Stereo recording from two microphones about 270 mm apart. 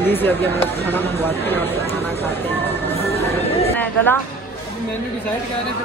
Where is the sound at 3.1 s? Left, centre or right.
Left.